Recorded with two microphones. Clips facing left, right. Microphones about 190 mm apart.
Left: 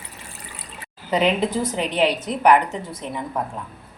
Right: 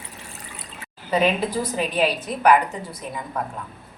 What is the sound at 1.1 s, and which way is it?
A woman's voice, 20° left (ahead or behind).